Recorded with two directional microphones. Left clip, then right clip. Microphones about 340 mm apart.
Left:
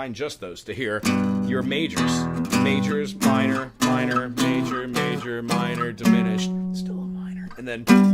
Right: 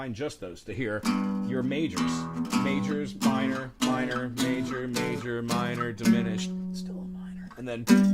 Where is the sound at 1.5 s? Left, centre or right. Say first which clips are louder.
Left 4 dB; centre.